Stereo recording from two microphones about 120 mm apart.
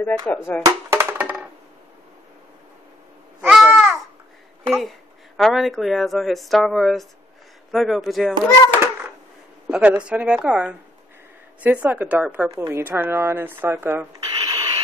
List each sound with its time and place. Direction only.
0.0 s speech: 15° left (ahead or behind)
0.6 s a sound: 30° right (ahead or behind)
1.1 s a sound: 10° right (ahead or behind)
3.4 s babbling: 5° right (ahead or behind)
5.4 s speech: centre (ahead or behind)
9.7 s a woman's voice: 10° right (ahead or behind)
14.2 s owl: 40° right (ahead or behind)